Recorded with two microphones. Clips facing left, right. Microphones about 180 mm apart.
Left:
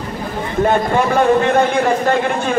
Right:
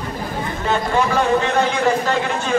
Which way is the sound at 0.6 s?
55° left (ahead or behind).